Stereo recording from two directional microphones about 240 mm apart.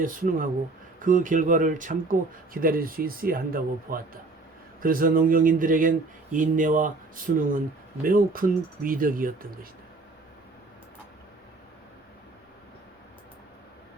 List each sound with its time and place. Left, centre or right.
0.0 s speech: right